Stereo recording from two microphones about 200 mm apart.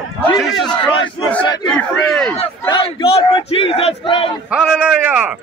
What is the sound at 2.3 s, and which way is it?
Battle cry, 25° left (ahead or behind).